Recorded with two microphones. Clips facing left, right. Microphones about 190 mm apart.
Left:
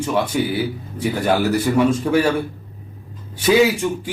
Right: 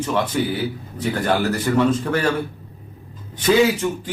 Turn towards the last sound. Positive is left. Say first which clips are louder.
# left 1 dB
turn(degrees=10)  # may be behind; listen again after turning